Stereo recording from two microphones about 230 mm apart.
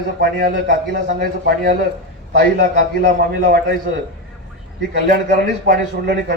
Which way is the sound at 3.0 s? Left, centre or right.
Right.